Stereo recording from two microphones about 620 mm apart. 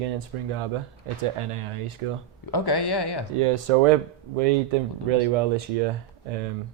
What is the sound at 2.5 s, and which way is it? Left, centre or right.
Speech, left.